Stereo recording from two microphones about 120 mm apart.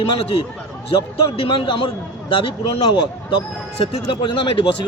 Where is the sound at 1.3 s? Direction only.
45° left (ahead or behind).